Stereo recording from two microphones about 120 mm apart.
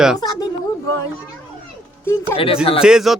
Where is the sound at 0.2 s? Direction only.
35° left (ahead or behind).